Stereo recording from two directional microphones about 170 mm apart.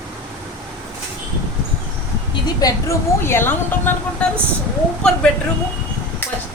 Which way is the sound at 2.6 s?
20° left (ahead or behind).